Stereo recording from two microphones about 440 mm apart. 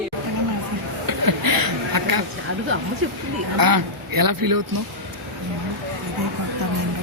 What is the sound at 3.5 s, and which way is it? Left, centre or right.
Speech, right.